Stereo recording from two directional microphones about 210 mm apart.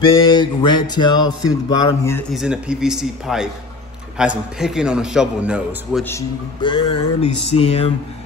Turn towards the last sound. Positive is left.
turn(degrees=30)  # may be behind; listen again after turning